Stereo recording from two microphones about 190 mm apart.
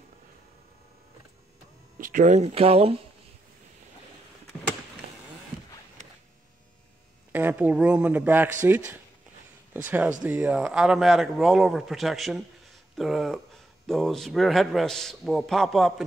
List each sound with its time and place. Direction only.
2.0 s speech: 45° right (ahead or behind)
7.3 s a man's voice: 10° right (ahead or behind)